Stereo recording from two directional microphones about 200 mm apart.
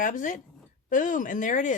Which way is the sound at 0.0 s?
40° left (ahead or behind).